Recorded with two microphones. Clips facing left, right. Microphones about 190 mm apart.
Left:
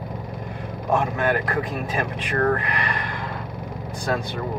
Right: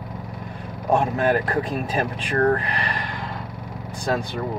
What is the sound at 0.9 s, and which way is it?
Speech, 35° right (ahead or behind).